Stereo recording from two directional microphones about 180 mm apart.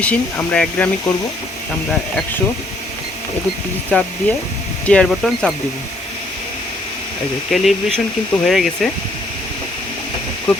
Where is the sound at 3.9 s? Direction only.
10° left (ahead or behind).